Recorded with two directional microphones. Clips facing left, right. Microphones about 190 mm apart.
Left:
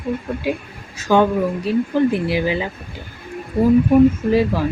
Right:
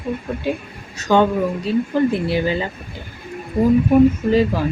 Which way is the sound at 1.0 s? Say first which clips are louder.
Even; 5° left (ahead or behind).